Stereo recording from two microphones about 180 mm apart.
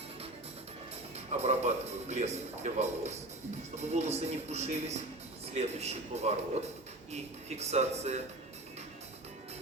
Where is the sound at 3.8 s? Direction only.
40° right (ahead or behind).